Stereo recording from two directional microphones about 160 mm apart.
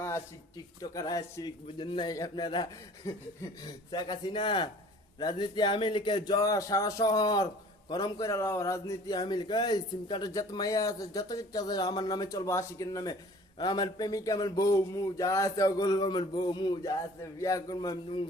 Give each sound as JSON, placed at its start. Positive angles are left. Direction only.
{"t": 0.8, "sound": "speech", "side_deg": 25}